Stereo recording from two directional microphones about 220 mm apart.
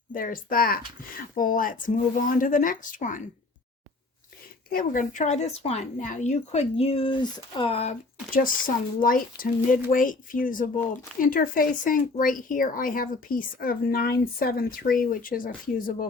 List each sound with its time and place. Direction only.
0.1 s speech: 40° left (ahead or behind)
4.7 s speech: 40° left (ahead or behind)